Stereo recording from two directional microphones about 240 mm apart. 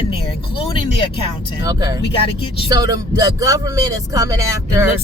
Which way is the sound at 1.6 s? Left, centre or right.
Centre.